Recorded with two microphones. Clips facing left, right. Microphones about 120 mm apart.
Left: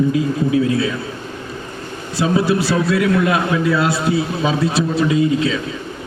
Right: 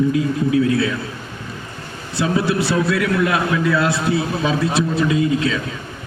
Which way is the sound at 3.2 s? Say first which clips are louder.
Left 2 dB; 20° left (ahead or behind).